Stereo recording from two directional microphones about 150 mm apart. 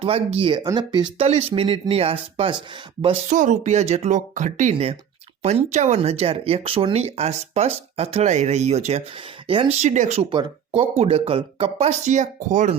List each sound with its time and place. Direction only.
0.0 s speech: 40° right (ahead or behind)
1.2 s speech: 45° right (ahead or behind)
3.2 s speech: 55° right (ahead or behind); by 9.6 s 35° right (ahead or behind)
9.7 s speech: 50° right (ahead or behind)
10.3 s speech: 35° right (ahead or behind); by 12.7 s 55° right (ahead or behind)